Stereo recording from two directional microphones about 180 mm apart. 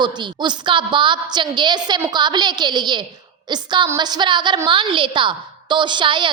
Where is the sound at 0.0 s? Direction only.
25° right (ahead or behind).